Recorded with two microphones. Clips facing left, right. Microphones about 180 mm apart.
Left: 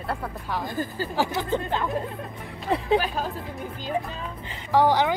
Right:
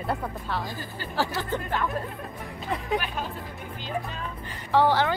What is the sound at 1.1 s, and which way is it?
Speech, 15° left (ahead or behind).